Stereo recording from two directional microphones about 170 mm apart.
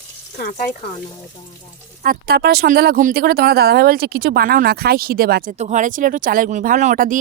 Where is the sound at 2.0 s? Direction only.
60° right (ahead or behind).